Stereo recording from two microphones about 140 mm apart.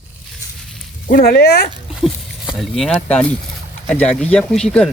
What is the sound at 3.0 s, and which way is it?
Speech, 10° left (ahead or behind).